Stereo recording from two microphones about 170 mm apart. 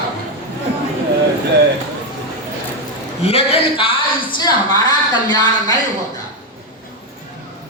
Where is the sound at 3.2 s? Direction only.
35° left (ahead or behind).